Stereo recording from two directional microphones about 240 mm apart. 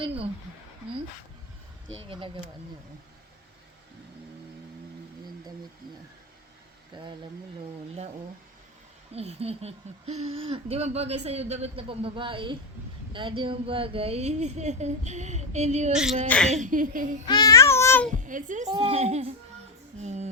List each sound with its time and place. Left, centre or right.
0.0 s speech: right
2.0 s speech: right
6.9 s speech: centre
9.1 s speech: right
15.9 s speech: centre
16.5 s a woman's voice: right
17.2 s babbling: centre
18.1 s speech: right